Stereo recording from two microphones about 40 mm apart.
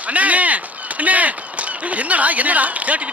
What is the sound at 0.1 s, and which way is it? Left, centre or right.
Chop, right.